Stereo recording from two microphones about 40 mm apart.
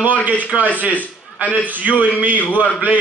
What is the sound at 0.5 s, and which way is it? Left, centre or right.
Speech, right.